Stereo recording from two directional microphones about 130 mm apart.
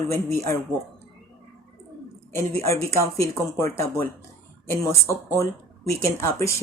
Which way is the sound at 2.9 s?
25° left (ahead or behind).